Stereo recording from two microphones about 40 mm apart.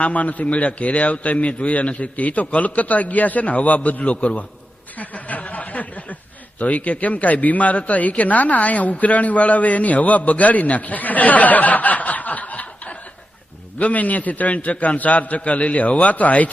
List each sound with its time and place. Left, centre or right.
0.0 s speech: left
4.9 s a sound: left
6.6 s speech: left